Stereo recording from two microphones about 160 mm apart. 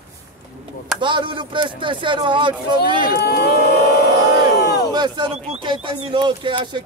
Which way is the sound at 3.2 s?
80° left.